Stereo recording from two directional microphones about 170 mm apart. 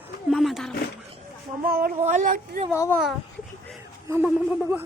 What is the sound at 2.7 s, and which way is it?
Speech, 15° left (ahead or behind).